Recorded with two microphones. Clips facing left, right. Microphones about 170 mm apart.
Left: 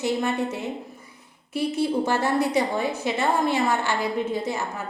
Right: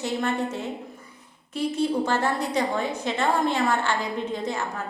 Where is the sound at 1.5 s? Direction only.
10° left (ahead or behind).